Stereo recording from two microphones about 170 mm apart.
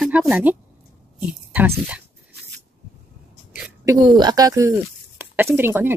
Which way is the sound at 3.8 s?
20° right (ahead or behind).